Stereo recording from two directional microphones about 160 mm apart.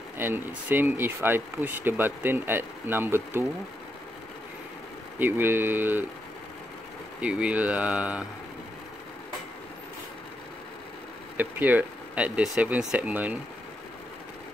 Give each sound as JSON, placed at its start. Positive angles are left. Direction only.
{"t": 0.2, "sound": "speech", "side_deg": -10}
{"t": 5.2, "sound": "speech", "side_deg": -15}
{"t": 7.2, "sound": "speech", "side_deg": -5}
{"t": 11.3, "sound": "speech", "side_deg": -10}